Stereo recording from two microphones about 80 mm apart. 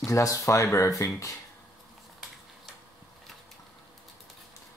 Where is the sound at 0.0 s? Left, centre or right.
Left.